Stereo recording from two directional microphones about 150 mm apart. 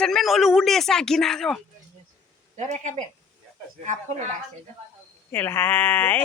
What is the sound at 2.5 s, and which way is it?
Speech, 50° right (ahead or behind).